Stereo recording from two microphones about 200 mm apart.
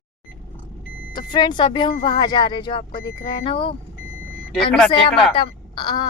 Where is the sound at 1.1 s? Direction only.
20° left (ahead or behind).